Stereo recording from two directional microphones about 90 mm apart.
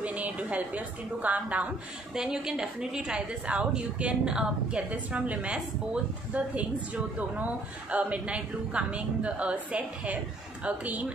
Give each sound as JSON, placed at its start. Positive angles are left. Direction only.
{"t": 0.0, "sound": "a woman's voice", "side_deg": -15}